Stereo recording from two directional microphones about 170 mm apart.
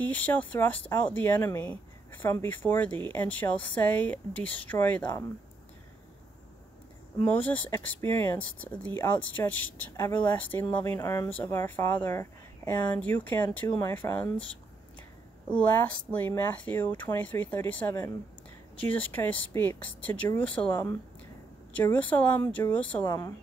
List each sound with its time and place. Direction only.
0.0 s speech: 10° left (ahead or behind)
7.2 s speech: 10° left (ahead or behind)
16.1 s speech: 10° left (ahead or behind)
21.7 s speech: 10° left (ahead or behind)
23.0 s speech: 20° left (ahead or behind)